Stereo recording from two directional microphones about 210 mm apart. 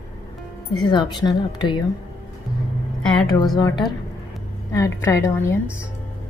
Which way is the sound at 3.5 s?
20° left (ahead or behind).